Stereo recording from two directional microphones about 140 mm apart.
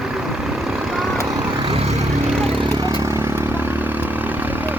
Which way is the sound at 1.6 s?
45° right (ahead or behind).